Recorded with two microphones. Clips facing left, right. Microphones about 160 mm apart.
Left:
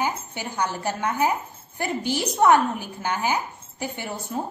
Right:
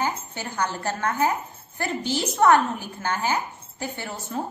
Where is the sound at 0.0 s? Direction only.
15° left (ahead or behind).